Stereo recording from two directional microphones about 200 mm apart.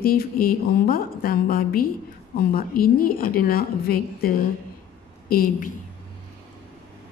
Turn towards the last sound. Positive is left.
turn(degrees=45)  # may be behind; listen again after turning